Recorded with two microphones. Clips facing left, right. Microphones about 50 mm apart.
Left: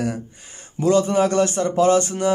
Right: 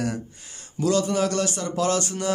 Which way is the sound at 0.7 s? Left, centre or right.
Left.